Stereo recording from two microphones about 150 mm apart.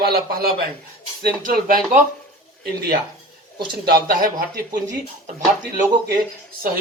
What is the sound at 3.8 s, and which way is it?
Speech, 70° right (ahead or behind).